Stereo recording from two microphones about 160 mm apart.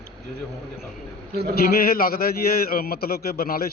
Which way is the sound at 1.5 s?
70° left (ahead or behind).